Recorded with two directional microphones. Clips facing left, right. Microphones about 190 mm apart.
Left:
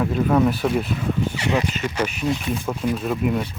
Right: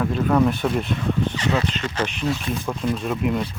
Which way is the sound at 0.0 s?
5° left (ahead or behind).